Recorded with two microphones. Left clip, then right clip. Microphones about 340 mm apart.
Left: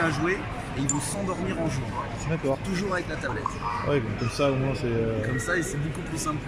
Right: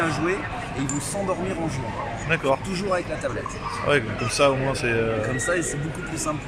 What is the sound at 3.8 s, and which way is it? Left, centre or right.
Speech, right.